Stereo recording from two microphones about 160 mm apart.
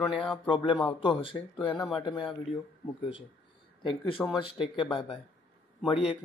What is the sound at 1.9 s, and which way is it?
Speech, 30° left (ahead or behind).